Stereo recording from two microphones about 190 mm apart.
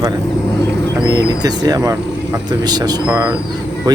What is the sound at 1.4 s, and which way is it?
Speech, 20° right (ahead or behind).